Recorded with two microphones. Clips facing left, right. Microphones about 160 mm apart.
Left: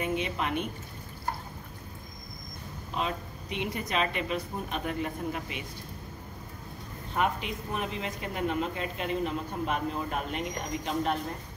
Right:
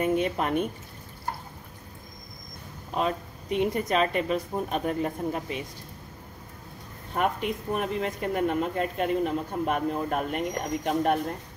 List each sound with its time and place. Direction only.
0.0 s speech: 45° right (ahead or behind)
2.9 s speech: 45° right (ahead or behind)
7.2 s speech: 50° right (ahead or behind)